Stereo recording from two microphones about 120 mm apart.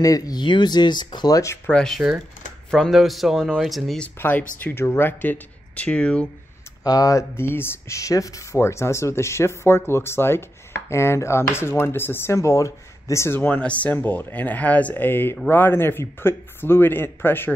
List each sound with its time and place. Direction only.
0.0 s speech: 30° left (ahead or behind)
1.7 s speech: 5° left (ahead or behind)
4.2 s a man's voice: 15° left (ahead or behind)
6.8 s a man's voice: 30° left (ahead or behind)